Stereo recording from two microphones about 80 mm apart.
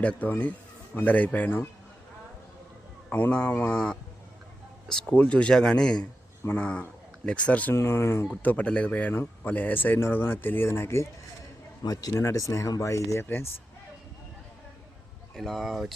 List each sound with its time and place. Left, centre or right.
0.0 s speech: centre
3.1 s speech: left
7.7 s speech: left
8.4 s speech: centre
11.8 s a man's voice: left
12.1 s speech: left
15.4 s speech: centre